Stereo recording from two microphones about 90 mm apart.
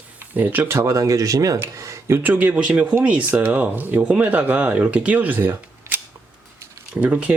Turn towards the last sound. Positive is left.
turn(degrees=-15)  # may be behind; listen again after turning